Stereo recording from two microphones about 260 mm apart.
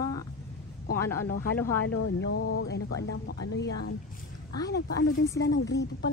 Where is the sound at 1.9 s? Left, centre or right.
Left.